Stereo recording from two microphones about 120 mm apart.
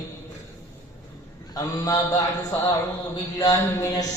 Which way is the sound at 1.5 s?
30° left (ahead or behind).